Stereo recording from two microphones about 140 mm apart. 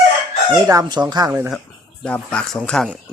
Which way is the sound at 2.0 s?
10° left (ahead or behind).